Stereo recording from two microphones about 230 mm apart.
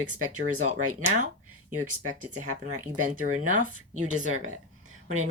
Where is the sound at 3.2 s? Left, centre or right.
Right.